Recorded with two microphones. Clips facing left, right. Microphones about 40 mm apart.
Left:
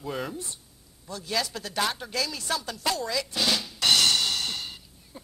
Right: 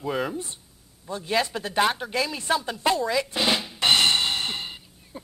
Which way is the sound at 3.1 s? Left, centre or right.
Right.